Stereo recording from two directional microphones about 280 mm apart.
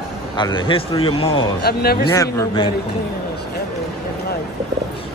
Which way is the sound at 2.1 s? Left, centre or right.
Centre.